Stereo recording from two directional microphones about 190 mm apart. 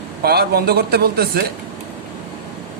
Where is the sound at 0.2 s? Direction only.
55° right (ahead or behind).